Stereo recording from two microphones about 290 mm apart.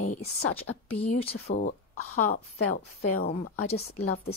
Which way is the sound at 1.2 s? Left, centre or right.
Left.